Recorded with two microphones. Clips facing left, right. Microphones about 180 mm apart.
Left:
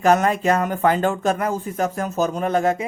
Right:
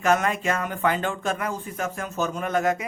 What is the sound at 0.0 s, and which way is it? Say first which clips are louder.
Speech: left 5 dB; 35° left (ahead or behind).